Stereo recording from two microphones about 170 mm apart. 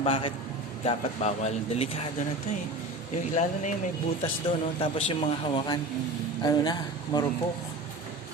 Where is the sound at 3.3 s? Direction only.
45° left (ahead or behind).